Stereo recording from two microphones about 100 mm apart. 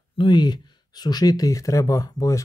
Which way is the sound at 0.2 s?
45° left (ahead or behind).